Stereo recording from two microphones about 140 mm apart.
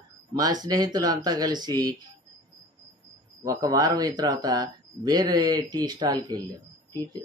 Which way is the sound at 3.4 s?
25° right (ahead or behind).